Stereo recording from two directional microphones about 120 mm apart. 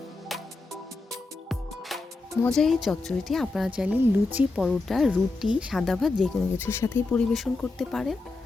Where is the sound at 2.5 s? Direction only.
Centre (ahead or behind).